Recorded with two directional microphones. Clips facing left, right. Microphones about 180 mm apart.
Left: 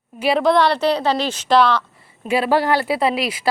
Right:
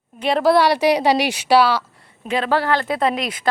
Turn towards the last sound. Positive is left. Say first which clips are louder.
# left 1 dB
turn(degrees=5)  # may be behind; listen again after turning